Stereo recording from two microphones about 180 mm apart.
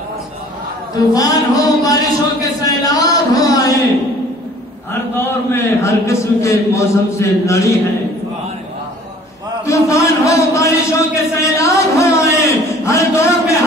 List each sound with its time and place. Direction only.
0.9 s a man's voice: 20° left (ahead or behind)
5.2 s a man's voice: 15° left (ahead or behind)
9.7 s a sound: 15° left (ahead or behind)